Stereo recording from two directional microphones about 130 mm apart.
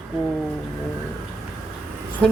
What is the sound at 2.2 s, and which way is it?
Speech, 10° left (ahead or behind).